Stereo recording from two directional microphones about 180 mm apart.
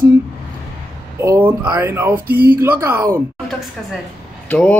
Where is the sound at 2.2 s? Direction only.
55° right (ahead or behind).